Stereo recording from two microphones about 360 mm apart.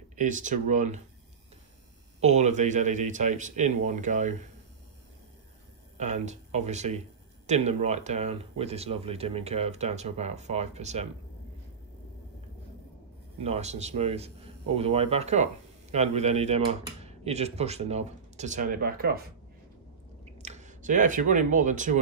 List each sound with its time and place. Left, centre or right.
0.1 s speech: right
2.1 s speech: centre
5.9 s speech: centre
13.4 s speech: centre
20.3 s speech: centre